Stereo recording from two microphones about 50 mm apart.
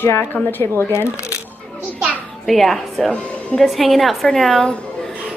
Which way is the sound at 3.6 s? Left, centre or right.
Centre.